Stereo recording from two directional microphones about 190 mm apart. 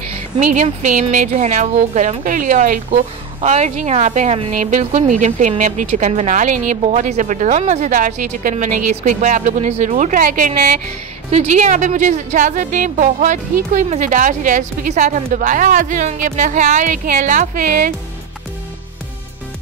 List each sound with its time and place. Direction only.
0.4 s a woman's voice: 40° right (ahead or behind)